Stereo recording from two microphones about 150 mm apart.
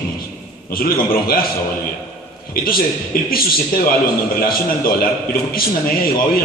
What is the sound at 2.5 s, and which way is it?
Speech, 75° left (ahead or behind).